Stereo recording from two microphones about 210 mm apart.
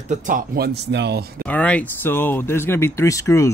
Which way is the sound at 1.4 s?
5° left (ahead or behind).